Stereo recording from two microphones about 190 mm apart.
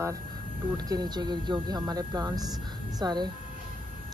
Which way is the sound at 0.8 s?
20° right (ahead or behind).